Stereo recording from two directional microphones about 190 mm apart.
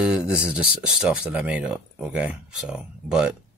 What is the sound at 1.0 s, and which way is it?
Speech, 5° right (ahead or behind).